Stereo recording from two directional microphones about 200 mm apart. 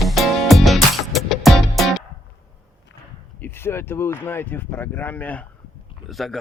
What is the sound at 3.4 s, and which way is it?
Speech, 10° left (ahead or behind).